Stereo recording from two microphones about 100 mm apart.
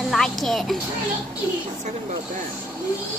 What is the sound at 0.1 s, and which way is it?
Speech, centre (ahead or behind).